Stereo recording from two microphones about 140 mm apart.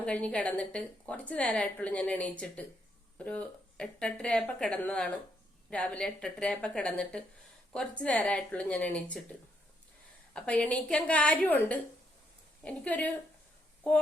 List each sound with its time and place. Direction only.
0.0 s a woman's voice: 10° left (ahead or behind)
10.3 s a woman's voice: 10° left (ahead or behind)